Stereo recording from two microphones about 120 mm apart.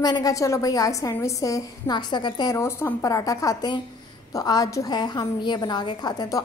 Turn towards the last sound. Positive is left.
turn(degrees=35)  # may be behind; listen again after turning